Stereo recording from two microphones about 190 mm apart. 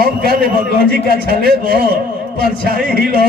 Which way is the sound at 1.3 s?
55° right (ahead or behind).